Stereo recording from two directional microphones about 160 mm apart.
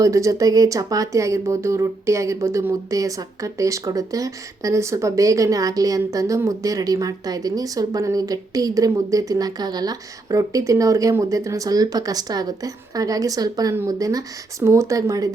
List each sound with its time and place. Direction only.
0.0 s speech: 20° right (ahead or behind)